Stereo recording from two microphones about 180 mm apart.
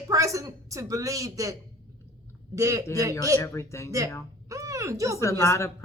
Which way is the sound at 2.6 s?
20° right (ahead or behind).